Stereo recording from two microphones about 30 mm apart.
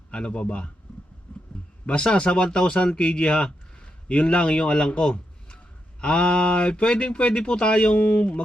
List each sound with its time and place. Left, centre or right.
0.1 s speech: left
0.9 s a sound: left
1.9 s speech: left
7.9 s speech: left
8.2 s music: left